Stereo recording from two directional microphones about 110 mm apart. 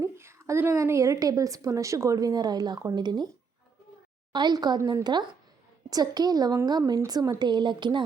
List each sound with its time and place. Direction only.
0.0 s a woman's voice: 25° right (ahead or behind); by 3.2 s 40° right (ahead or behind)
4.3 s a woman's voice: 40° right (ahead or behind)